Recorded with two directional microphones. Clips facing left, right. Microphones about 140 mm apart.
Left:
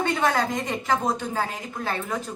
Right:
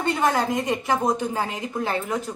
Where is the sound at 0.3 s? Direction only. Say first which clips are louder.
Right 2 dB; 15° right (ahead or behind).